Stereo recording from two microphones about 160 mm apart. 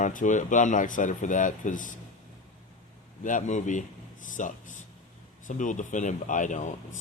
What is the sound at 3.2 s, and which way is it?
Speech, 50° left (ahead or behind).